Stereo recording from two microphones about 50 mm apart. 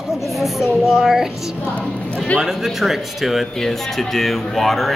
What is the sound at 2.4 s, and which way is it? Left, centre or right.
Speech, centre.